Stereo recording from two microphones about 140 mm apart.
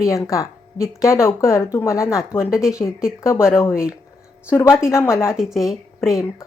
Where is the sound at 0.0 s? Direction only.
20° left (ahead or behind).